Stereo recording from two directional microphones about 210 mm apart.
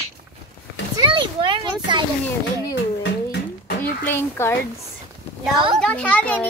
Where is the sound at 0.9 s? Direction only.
20° right (ahead or behind).